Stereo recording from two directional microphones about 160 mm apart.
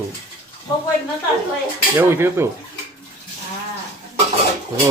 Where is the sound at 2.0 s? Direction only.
15° right (ahead or behind).